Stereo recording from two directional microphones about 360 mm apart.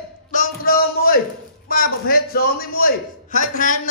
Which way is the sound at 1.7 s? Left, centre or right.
Left.